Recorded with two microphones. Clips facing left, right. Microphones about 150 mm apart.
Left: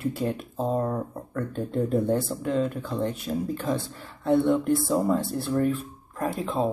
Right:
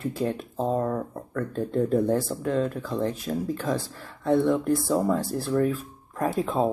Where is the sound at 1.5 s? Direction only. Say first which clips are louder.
Right 2 dB; centre (ahead or behind).